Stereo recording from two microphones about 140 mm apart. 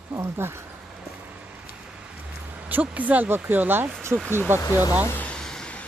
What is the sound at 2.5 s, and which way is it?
Speech, 10° right (ahead or behind).